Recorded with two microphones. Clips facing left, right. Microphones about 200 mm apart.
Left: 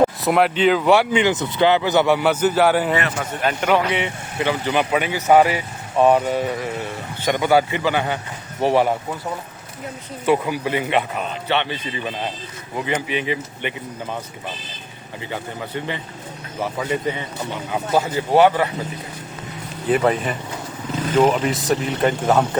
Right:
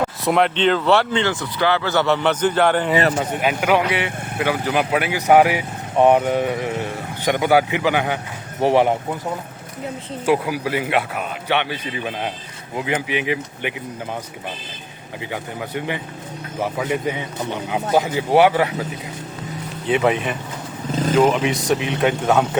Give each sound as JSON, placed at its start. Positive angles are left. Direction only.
{"t": 0.3, "sound": "speech", "side_deg": 5}
{"t": 3.2, "sound": "speech", "side_deg": -5}
{"t": 10.2, "sound": "speech", "side_deg": -5}
{"t": 15.3, "sound": "speech", "side_deg": -10}
{"t": 19.9, "sound": "speech", "side_deg": 0}